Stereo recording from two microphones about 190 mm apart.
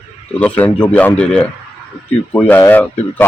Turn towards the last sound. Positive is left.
turn(degrees=10)  # may be behind; listen again after turning